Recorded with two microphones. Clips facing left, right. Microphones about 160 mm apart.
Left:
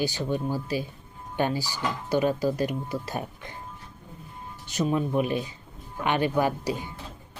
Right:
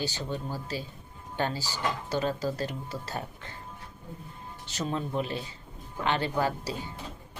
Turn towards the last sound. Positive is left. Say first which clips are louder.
# left 4 dB
turn(degrees=15)  # may be behind; listen again after turning